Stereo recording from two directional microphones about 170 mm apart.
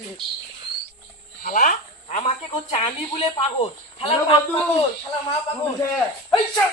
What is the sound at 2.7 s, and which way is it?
A woman's voice, 35° left (ahead or behind).